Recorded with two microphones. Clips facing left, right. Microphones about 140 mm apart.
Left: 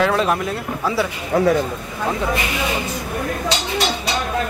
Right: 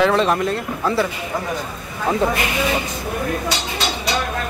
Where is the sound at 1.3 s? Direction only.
65° left (ahead or behind).